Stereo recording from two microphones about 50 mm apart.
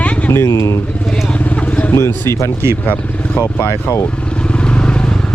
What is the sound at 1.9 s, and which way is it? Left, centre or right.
Speech, left.